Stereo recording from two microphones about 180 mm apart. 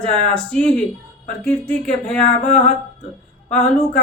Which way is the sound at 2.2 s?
40° left (ahead or behind).